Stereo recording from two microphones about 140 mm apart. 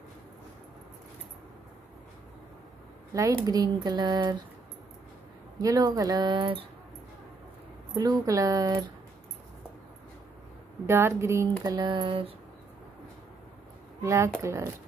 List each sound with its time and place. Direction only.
3.1 s speech: 25° right (ahead or behind)
5.6 s speech: 25° right (ahead or behind)
7.9 s speech: 25° right (ahead or behind)
10.9 s speech: 20° right (ahead or behind); by 12.3 s 35° right (ahead or behind)
14.0 s speech: 20° right (ahead or behind)